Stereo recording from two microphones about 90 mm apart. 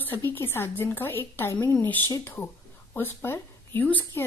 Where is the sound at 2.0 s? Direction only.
30° left (ahead or behind).